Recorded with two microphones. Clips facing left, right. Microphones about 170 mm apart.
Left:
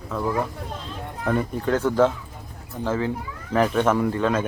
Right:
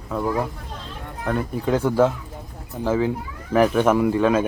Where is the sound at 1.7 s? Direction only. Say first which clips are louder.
Right 1 dB; 10° right (ahead or behind).